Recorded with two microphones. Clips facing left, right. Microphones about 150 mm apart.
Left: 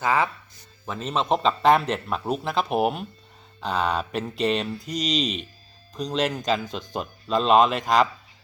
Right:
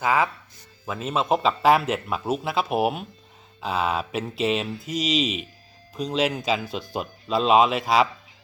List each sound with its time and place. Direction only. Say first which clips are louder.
0.0 s speech: right 1 dB; 10° right (ahead or behind)